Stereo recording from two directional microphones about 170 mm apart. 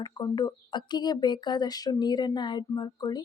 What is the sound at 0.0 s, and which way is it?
Speech, 25° left (ahead or behind).